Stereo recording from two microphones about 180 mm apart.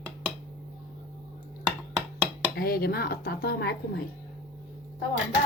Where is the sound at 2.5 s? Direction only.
60° left (ahead or behind).